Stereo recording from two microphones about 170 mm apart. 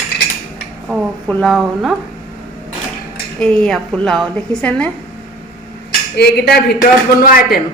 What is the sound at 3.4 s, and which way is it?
A woman's voice, 5° left (ahead or behind).